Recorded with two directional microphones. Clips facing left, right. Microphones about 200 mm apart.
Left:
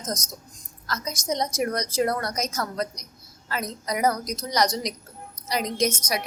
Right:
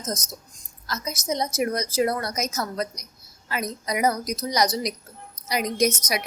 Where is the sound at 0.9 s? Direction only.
10° right (ahead or behind).